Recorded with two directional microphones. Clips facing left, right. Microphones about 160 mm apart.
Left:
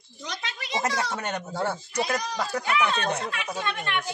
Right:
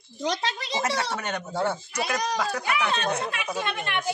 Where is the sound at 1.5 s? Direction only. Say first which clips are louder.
Right 2 dB; 20° right (ahead or behind).